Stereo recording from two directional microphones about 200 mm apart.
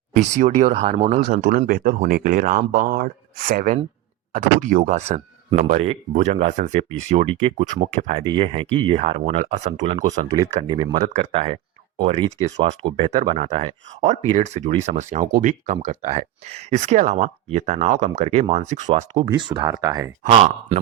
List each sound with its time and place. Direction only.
0.2 s speech: 35° right (ahead or behind)
10.7 s speech: 20° right (ahead or behind)
19.5 s speech: 20° right (ahead or behind)
20.2 s speech: 35° right (ahead or behind)